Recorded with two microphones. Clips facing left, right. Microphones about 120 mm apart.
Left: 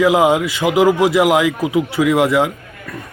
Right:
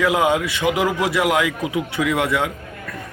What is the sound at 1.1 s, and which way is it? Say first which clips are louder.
A man's voice: left 5 dB; 30° left (ahead or behind).